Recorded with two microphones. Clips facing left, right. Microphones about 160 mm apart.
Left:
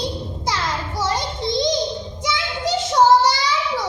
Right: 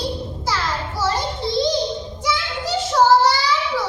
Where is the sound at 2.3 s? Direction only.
20° left (ahead or behind).